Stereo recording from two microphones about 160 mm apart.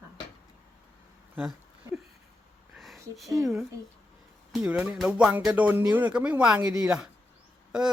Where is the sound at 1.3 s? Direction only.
5° right (ahead or behind).